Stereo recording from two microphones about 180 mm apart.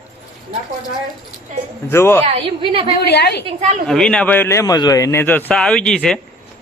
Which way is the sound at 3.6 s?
40° right (ahead or behind).